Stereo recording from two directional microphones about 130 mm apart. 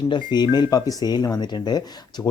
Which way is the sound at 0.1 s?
35° left (ahead or behind).